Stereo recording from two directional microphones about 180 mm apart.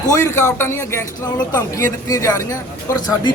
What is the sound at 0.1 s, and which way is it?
Speech, 15° left (ahead or behind).